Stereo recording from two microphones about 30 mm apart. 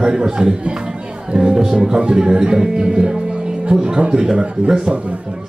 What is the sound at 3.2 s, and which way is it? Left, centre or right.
Music, right.